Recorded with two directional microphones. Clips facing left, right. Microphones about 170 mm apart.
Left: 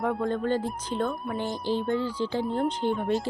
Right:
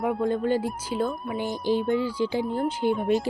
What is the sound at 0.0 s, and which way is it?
Speech, 10° right (ahead or behind).